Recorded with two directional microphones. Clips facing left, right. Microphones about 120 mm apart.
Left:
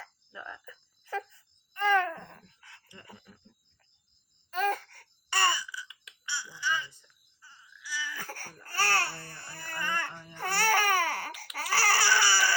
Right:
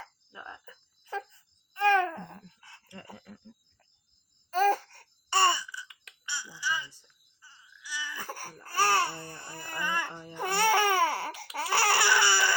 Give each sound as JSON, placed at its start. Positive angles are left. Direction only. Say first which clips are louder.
{"t": 1.7, "sound": "wail", "louder": "right 2 dB", "side_deg": -15}
{"t": 2.6, "sound": "a sound", "louder": "right 1 dB", "side_deg": -30}
{"t": 4.5, "sound": "babbling", "louder": "right 5 dB", "side_deg": -35}
{"t": 6.2, "sound": "a sound", "louder": "left 1 dB", "side_deg": -15}
{"t": 7.8, "sound": "baby cry", "louder": "left 1 dB", "side_deg": -15}
{"t": 10.3, "sound": "babbling", "louder": "right 2 dB", "side_deg": -20}